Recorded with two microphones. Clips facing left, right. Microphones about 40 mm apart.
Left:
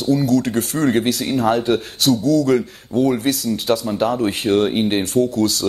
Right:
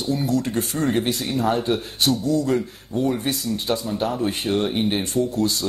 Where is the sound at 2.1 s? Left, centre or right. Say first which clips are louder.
Left 7 dB; left.